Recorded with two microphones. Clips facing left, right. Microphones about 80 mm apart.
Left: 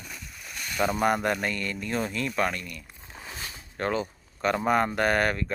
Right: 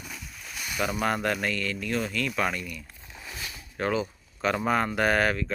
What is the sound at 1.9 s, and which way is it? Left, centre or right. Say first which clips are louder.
Speech: left 1 dB; centre.